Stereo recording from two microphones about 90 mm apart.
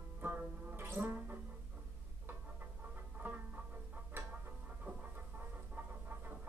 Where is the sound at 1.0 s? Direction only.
25° right (ahead or behind).